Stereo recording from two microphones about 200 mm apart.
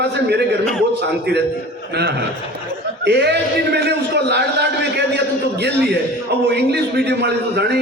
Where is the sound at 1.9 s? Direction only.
55° right (ahead or behind).